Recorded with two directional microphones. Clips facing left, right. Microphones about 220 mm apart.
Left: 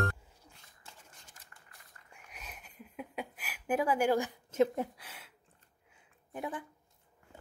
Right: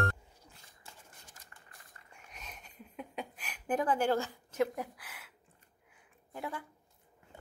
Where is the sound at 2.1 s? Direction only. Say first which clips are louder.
Even; 5° left (ahead or behind); by 5.2 s 25° left (ahead or behind).